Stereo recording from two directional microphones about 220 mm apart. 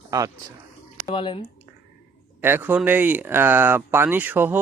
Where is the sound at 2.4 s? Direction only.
10° right (ahead or behind).